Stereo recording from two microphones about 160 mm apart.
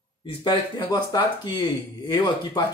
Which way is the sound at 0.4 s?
25° left (ahead or behind).